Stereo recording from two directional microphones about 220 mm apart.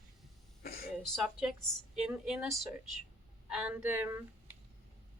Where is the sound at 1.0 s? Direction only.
Centre (ahead or behind).